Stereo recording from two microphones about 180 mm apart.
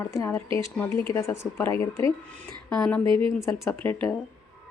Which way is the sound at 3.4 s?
15° left (ahead or behind).